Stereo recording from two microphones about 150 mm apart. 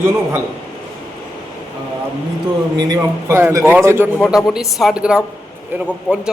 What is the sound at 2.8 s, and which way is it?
Speech, 25° right (ahead or behind).